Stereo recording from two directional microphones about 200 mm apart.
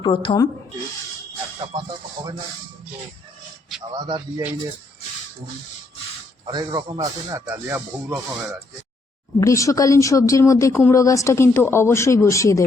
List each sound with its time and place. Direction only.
0.0 s speech: 25° left (ahead or behind)
3.9 s speech: 20° right (ahead or behind)
6.5 s speech: 20° right (ahead or behind)
9.4 s speech: 15° left (ahead or behind)